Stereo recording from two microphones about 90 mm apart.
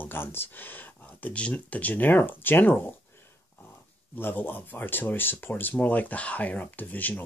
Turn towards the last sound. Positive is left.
turn(degrees=20)  # may be behind; listen again after turning